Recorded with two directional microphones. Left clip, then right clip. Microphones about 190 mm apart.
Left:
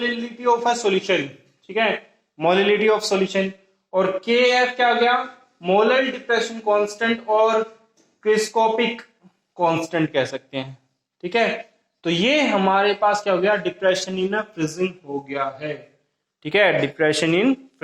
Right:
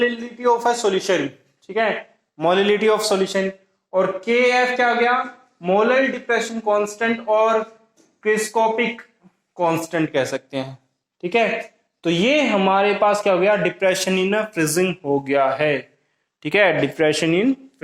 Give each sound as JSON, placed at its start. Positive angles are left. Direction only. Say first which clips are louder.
{"t": 0.1, "sound": "a man's voice", "louder": "right 1 dB", "side_deg": -25}
{"t": 15.0, "sound": "a man's voice", "louder": "right 8 dB", "side_deg": -20}